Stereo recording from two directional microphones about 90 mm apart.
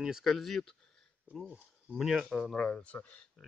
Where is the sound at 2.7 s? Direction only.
15° left (ahead or behind).